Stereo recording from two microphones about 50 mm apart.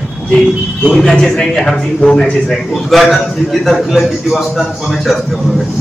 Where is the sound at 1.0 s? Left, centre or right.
Centre.